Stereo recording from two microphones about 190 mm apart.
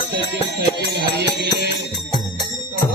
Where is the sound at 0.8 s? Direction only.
60° right (ahead or behind).